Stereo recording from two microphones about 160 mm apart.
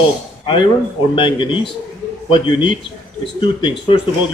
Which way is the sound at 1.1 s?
30° left (ahead or behind).